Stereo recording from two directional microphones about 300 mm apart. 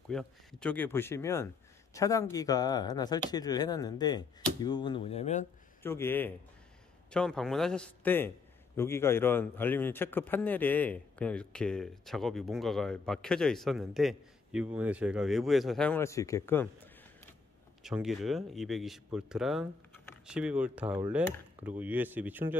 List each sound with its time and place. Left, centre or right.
0.1 s speech: centre; by 5.5 s left
5.8 s a man's voice: centre